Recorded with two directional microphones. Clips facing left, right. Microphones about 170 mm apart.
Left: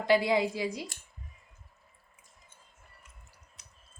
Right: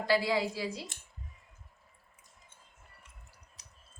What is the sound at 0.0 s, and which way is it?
Speech, 20° left (ahead or behind).